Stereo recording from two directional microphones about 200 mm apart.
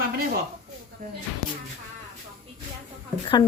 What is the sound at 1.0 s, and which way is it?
Speech, 45° right (ahead or behind).